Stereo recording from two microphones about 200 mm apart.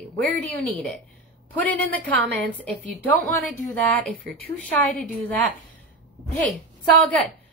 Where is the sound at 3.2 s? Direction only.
40° left (ahead or behind).